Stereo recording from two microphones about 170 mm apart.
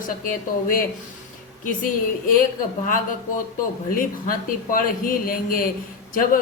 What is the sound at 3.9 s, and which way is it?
Speech, 55° left (ahead or behind).